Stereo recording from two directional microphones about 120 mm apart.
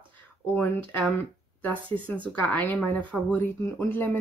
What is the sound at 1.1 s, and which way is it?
Speech, 15° left (ahead or behind).